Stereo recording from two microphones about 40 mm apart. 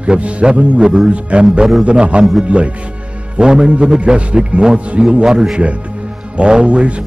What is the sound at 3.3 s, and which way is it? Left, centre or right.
A man's voice, right.